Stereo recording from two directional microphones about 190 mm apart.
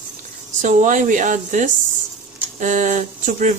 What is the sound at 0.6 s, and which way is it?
Speech, 40° right (ahead or behind).